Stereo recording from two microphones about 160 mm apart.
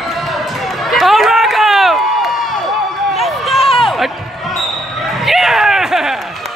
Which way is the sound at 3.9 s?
Centre (ahead or behind).